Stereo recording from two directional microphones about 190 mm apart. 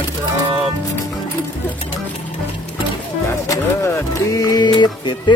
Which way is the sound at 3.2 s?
15° left (ahead or behind).